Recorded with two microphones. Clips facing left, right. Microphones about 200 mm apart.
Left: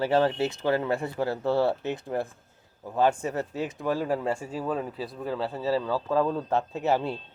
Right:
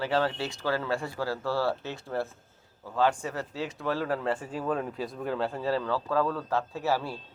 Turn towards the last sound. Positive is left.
turn(degrees=20)  # may be behind; listen again after turning